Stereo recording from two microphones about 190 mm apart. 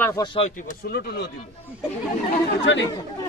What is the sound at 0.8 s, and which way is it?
Speech, 55° left (ahead or behind).